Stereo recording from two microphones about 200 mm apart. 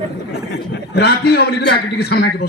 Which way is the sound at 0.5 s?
55° left (ahead or behind).